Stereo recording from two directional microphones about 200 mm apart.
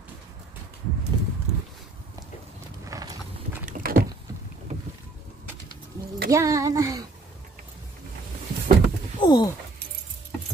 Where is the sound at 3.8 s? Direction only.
45° right (ahead or behind).